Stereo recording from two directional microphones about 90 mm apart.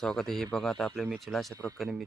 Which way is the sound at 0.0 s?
5° left (ahead or behind).